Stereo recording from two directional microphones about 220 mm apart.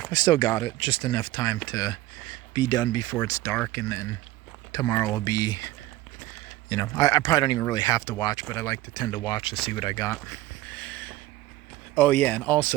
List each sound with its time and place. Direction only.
0.1 s speech: 20° left (ahead or behind)
10.7 s a sound: 5° left (ahead or behind)
11.9 s speech: 5° left (ahead or behind)